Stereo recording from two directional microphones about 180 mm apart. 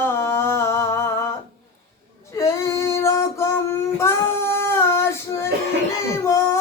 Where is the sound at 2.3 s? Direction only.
15° left (ahead or behind).